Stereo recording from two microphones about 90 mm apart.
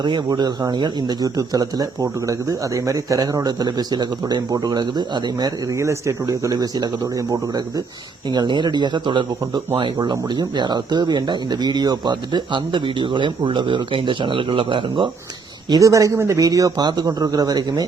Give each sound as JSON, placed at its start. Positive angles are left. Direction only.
{"t": 0.3, "sound": "speech", "side_deg": -45}
{"t": 5.7, "sound": "a man's voice", "side_deg": -30}
{"t": 8.3, "sound": "speech", "side_deg": -55}
{"t": 15.7, "sound": "a man's voice", "side_deg": -35}